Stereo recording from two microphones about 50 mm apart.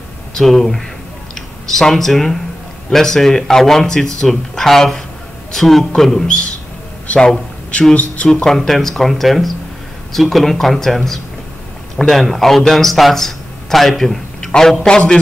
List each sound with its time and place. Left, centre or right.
0.3 s speech: centre
7.1 s speech: left
8.5 s speech: centre
12.0 s a man's voice: centre